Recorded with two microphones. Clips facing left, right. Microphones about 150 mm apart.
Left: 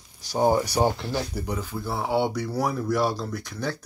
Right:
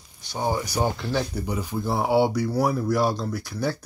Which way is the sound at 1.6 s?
15° right (ahead or behind).